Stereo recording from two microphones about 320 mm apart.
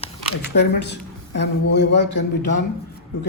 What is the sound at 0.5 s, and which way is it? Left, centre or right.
A man's voice, left.